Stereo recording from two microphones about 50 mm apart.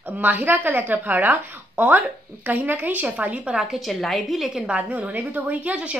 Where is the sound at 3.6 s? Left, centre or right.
Centre.